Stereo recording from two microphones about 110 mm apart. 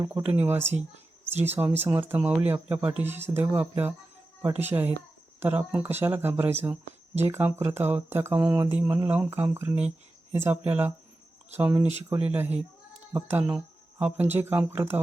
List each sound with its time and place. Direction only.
0.1 s mantra: 15° right (ahead or behind)
1.4 s speech: 20° right (ahead or behind)
4.4 s mantra: 20° right (ahead or behind)
5.4 s speech: 15° right (ahead or behind)
8.4 s mantra: 20° right (ahead or behind)
10.3 s speech: 20° right (ahead or behind)
11.7 s mantra: 15° right (ahead or behind)
13.1 s speech: 20° right (ahead or behind)
14.0 s mantra: 15° right (ahead or behind)